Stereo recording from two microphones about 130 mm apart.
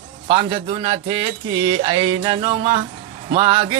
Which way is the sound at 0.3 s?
40° right (ahead or behind).